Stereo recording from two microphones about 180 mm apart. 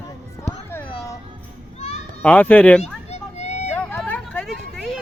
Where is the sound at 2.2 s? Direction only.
10° left (ahead or behind).